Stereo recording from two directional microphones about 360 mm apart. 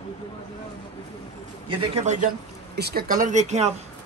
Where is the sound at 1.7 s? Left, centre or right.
Centre.